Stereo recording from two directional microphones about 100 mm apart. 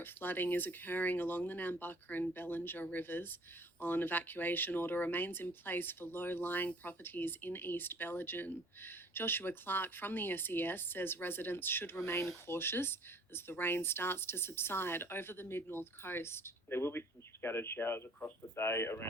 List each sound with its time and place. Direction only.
0.0 s speech: 20° left (ahead or behind)